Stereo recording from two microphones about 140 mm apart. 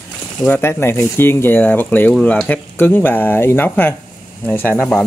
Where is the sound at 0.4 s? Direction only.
15° left (ahead or behind).